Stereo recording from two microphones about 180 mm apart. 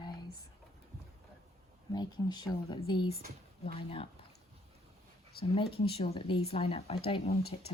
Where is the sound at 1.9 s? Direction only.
20° left (ahead or behind).